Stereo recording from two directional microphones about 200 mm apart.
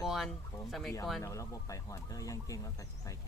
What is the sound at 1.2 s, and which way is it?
Speech, 15° left (ahead or behind).